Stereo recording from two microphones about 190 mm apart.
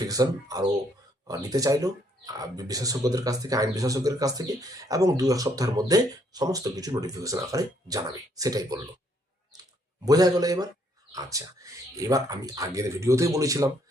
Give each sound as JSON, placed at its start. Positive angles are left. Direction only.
{"t": 0.1, "sound": "speech", "side_deg": -20}
{"t": 10.1, "sound": "speech", "side_deg": -20}